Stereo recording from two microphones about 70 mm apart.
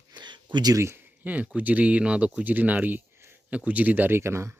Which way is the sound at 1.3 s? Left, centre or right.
Right.